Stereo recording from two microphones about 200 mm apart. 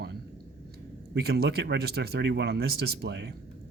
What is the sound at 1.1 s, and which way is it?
Speech, 50° right (ahead or behind).